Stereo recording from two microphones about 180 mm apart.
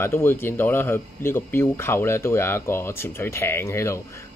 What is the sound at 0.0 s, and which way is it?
Speech, 15° left (ahead or behind).